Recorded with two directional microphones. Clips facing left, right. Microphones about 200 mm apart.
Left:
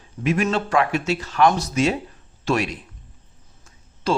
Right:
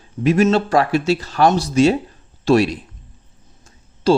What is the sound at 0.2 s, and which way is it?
Speech, 35° right (ahead or behind).